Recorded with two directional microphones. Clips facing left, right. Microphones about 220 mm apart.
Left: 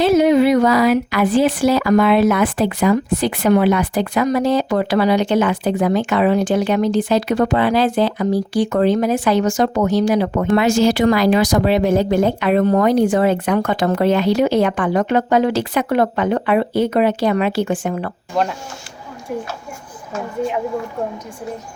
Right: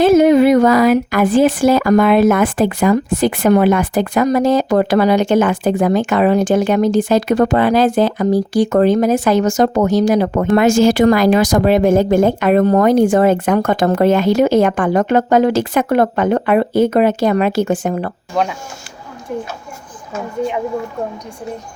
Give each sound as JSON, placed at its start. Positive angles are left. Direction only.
{"t": 0.0, "sound": "speech", "side_deg": -50}
{"t": 18.3, "sound": "speech", "side_deg": 0}